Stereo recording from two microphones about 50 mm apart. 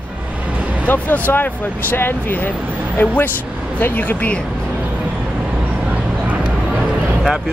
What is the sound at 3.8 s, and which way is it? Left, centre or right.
Speech, left.